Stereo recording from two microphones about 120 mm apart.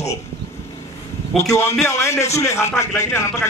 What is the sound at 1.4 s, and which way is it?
A man's voice, 25° left (ahead or behind).